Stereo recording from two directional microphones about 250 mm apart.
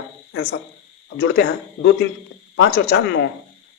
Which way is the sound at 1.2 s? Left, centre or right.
Left.